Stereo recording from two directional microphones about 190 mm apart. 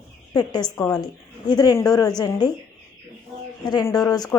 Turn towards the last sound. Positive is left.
turn(degrees=20)  # may be behind; listen again after turning